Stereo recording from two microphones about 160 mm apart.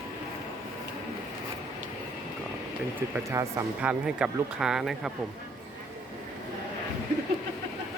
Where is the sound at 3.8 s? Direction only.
5° right (ahead or behind).